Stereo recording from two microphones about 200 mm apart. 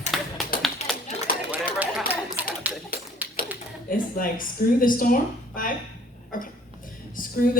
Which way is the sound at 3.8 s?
45° left (ahead or behind).